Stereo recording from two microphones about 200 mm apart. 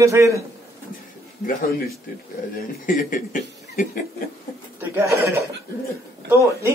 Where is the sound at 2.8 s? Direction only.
45° left (ahead or behind).